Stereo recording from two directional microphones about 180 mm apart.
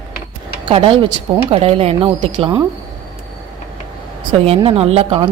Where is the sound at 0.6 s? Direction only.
30° right (ahead or behind).